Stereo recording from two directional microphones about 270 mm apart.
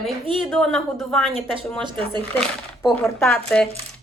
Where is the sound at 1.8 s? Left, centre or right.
Centre.